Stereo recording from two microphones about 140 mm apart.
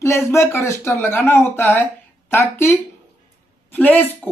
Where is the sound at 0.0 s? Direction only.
20° left (ahead or behind).